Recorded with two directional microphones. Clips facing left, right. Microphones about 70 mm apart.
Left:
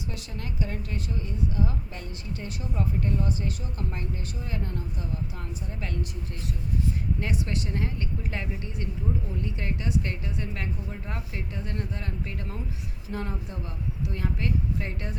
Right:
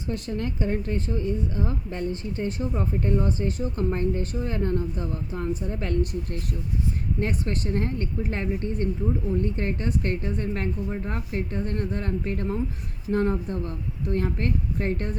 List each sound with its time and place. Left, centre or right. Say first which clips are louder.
0.1 s a woman's voice: right 9 dB; right
7.2 s a woman's voice: right 3 dB; right